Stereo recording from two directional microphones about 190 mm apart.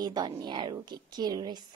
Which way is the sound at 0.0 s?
20° right (ahead or behind).